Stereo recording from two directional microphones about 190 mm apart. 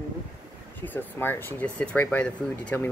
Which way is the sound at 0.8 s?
10° left (ahead or behind).